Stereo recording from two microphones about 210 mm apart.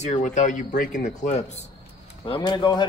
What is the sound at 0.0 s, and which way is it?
Speech, 35° left (ahead or behind).